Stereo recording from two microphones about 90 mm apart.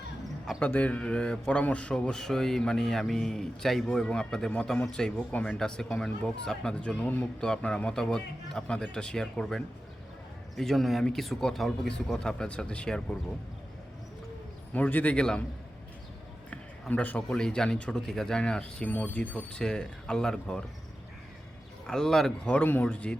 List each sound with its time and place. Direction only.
0.6 s a man's voice: 15° left (ahead or behind)
7.0 s speech: 20° left (ahead or behind)
7.4 s a man's voice: 10° left (ahead or behind)
14.7 s a man's voice: 20° left (ahead or behind)
16.9 s a man's voice: 15° left (ahead or behind)
21.8 s speech: 5° left (ahead or behind)
22.5 s a man's voice: 20° left (ahead or behind)